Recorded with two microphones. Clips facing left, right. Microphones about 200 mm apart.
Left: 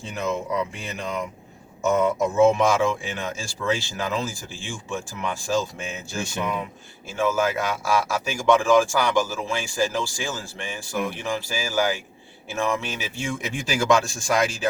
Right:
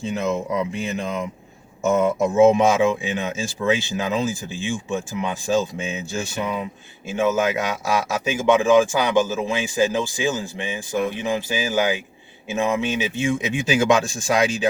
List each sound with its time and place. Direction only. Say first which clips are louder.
0.1 s a man's voice: right 2 dB; 20° right (ahead or behind)
7.1 s a man's voice: right 3 dB; 20° right (ahead or behind)